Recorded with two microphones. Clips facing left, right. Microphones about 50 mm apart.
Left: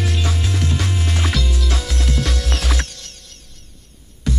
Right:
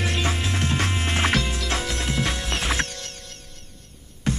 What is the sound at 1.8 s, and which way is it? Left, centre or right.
Music, centre.